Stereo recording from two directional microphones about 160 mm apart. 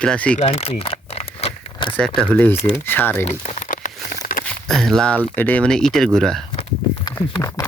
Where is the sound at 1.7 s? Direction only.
30° left (ahead or behind).